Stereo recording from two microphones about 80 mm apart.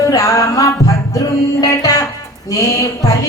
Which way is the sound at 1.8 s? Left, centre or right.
Left.